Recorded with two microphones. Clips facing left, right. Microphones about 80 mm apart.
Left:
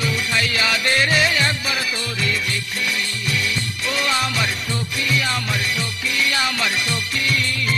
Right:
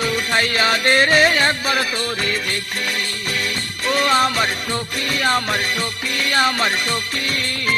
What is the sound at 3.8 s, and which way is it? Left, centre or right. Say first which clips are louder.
Music: right 6 dB; right.